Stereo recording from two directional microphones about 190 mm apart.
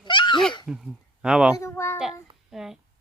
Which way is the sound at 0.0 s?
25° left (ahead or behind).